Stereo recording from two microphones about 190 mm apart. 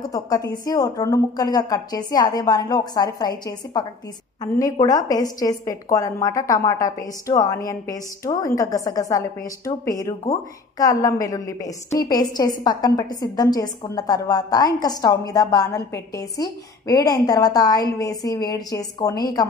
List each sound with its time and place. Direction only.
0.1 s a woman's voice: 20° left (ahead or behind)